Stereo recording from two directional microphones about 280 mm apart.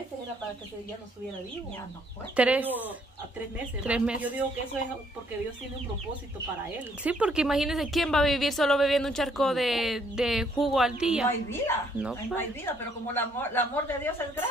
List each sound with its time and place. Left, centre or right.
2.3 s a woman's voice: centre
3.8 s a woman's voice: centre
7.0 s a woman's voice: centre
11.2 s a woman's voice: centre